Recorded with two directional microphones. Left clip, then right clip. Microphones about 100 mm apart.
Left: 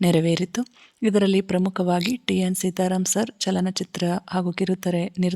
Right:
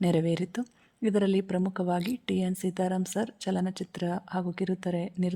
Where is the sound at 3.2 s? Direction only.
30° left (ahead or behind).